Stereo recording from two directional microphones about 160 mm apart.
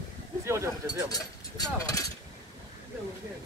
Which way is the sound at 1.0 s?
25° left (ahead or behind).